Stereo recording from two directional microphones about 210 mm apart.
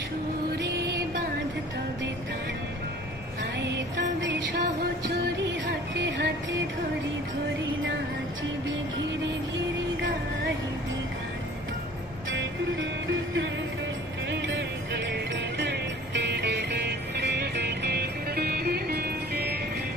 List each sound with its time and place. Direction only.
3.7 s music: 60° right (ahead or behind)
6.0 s music: 55° right (ahead or behind)
14.3 s music: 60° right (ahead or behind)